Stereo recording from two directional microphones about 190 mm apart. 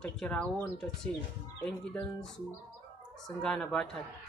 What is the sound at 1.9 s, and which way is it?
Speech, 5° left (ahead or behind).